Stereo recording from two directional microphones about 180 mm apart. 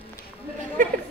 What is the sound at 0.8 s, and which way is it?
Chatter, 45° right (ahead or behind).